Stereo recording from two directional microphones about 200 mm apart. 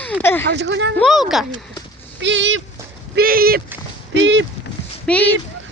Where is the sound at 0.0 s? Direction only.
10° left (ahead or behind).